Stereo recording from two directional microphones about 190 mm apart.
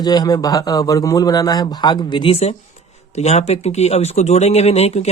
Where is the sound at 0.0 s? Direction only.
20° left (ahead or behind).